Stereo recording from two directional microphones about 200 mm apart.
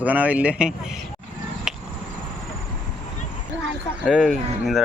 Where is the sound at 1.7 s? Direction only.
Centre (ahead or behind).